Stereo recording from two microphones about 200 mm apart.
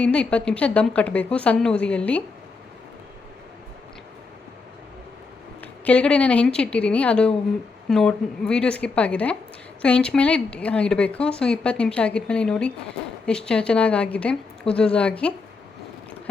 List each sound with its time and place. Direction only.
0.0 s a woman's voice: 5° left (ahead or behind)
5.8 s speech: 5° left (ahead or behind)